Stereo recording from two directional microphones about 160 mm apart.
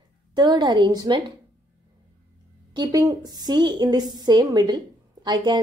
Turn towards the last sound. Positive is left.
turn(degrees=-25)  # may be behind; listen again after turning